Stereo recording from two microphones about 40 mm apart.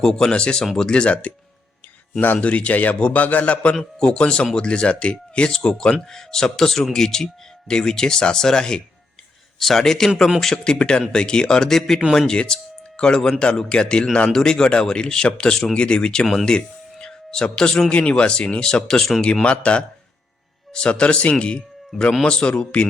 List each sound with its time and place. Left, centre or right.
0.0 s speech: centre
2.4 s a man's voice: left; by 8.8 s centre
9.6 s speech: centre
16.2 s speech: centre
16.5 s speech: centre